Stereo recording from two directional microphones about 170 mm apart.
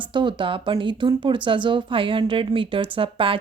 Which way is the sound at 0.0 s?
30° right (ahead or behind).